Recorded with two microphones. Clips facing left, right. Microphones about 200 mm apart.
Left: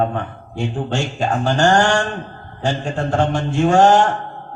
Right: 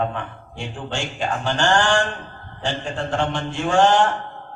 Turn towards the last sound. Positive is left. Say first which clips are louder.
# left 4 dB
turn(degrees=45)  # may be behind; listen again after turning